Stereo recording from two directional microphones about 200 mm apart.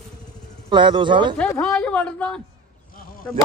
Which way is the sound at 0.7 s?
25° right (ahead or behind).